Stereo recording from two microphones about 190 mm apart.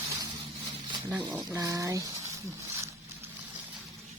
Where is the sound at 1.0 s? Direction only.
10° right (ahead or behind).